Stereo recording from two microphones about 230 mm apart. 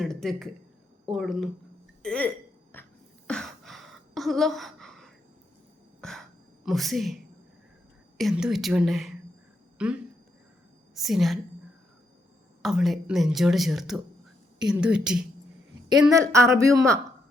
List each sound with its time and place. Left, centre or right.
0.0 s speech: centre
2.7 s cough: centre
3.2 s gasp: centre
6.0 s cough: centre
6.7 s speech: centre
8.2 s a woman's voice: centre
12.6 s speech: centre
16.1 s speech: centre